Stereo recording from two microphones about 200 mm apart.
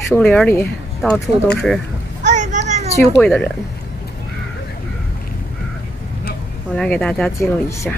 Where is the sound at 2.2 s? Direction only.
35° right (ahead or behind).